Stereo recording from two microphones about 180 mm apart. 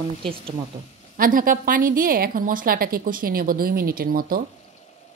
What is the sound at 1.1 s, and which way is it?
A woman's voice, 50° right (ahead or behind).